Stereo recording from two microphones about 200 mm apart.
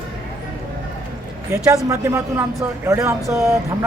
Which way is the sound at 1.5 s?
15° right (ahead or behind).